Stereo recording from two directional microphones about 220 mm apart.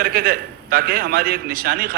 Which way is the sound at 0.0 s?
45° right (ahead or behind).